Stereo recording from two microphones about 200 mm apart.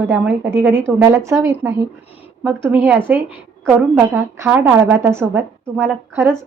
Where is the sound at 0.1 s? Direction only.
10° right (ahead or behind).